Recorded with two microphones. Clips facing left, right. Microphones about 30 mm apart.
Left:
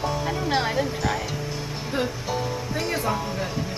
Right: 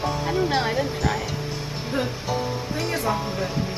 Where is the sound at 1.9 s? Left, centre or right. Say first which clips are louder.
Even; left.